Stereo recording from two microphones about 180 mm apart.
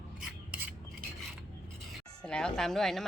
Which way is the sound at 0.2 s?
5° right (ahead or behind).